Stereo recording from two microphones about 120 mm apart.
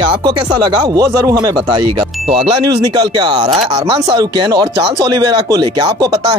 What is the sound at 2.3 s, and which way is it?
Speech, 50° right (ahead or behind).